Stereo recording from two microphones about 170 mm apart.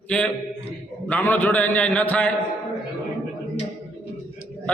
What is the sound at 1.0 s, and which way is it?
A man's voice, 10° left (ahead or behind).